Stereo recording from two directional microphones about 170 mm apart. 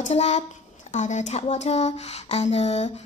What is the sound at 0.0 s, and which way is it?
Speech, 40° left (ahead or behind).